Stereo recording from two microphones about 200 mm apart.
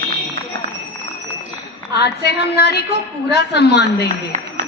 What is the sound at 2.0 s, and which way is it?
A woman's voice, 55° left (ahead or behind).